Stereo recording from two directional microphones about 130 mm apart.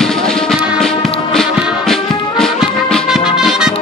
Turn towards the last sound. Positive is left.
turn(degrees=-5)  # may be behind; listen again after turning